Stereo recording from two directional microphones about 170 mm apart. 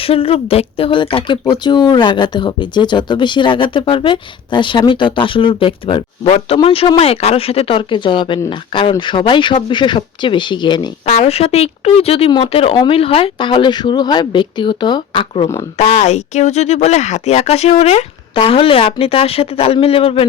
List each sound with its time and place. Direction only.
0.0 s speech: 35° left (ahead or behind)
11.0 s speech: 40° left (ahead or behind)
15.8 s speech: 40° left (ahead or behind)